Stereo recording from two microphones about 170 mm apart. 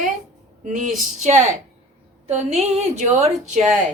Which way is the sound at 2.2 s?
40° right (ahead or behind).